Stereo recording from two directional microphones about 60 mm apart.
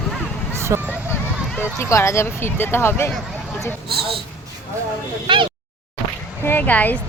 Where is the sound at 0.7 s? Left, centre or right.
Right.